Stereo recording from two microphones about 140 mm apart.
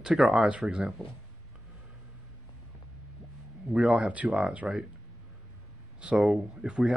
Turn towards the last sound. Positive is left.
turn(degrees=-5)  # may be behind; listen again after turning